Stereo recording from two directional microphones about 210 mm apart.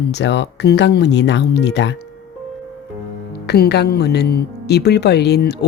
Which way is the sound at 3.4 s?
50° left (ahead or behind).